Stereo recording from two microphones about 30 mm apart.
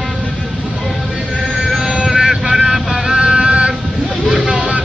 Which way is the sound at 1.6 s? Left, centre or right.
Centre.